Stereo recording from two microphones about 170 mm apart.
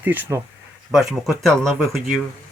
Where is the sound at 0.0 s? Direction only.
10° right (ahead or behind).